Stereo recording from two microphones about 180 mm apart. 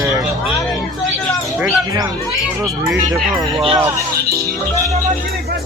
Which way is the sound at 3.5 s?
30° right (ahead or behind).